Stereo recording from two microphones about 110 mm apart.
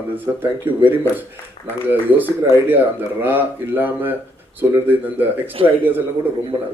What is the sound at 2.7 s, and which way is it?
Speech, 15° right (ahead or behind).